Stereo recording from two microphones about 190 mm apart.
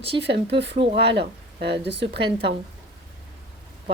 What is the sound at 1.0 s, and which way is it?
Speech, 60° right (ahead or behind).